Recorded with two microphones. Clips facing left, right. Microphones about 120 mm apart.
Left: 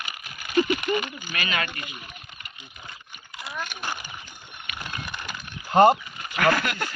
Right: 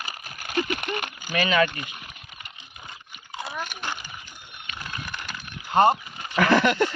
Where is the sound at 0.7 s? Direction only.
55° right (ahead or behind).